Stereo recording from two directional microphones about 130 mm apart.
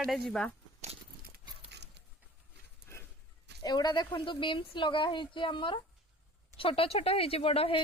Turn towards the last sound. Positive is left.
turn(degrees=45)  # may be behind; listen again after turning